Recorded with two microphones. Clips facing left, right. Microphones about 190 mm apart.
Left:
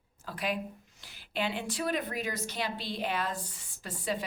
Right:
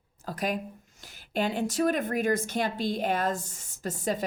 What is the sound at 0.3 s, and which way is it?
A woman's voice, 45° right (ahead or behind).